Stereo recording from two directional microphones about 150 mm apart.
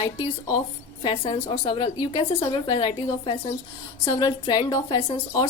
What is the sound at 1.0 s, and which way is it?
A woman's voice, 35° left (ahead or behind).